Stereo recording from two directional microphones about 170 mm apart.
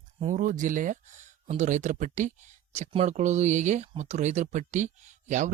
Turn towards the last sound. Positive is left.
turn(degrees=-45)  # may be behind; listen again after turning